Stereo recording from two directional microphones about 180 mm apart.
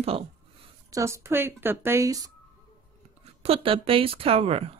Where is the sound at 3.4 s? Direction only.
30° right (ahead or behind).